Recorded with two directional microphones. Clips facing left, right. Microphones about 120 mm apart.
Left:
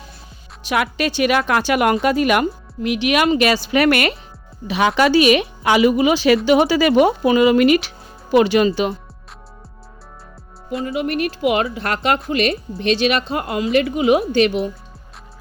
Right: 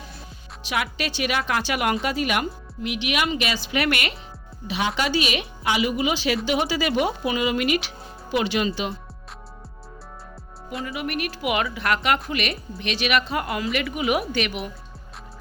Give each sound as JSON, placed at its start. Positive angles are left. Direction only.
{"t": 0.6, "sound": "speech", "side_deg": 50}
{"t": 4.7, "sound": "a woman's voice", "side_deg": 65}
{"t": 10.8, "sound": "a woman's voice", "side_deg": 30}